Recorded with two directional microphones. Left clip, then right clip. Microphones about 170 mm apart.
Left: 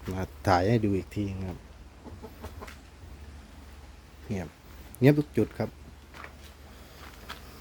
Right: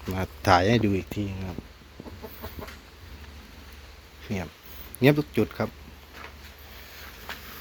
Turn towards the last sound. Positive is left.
turn(degrees=20)  # may be behind; listen again after turning